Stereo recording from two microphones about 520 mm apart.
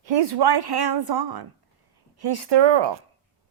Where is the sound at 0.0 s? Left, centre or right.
Right.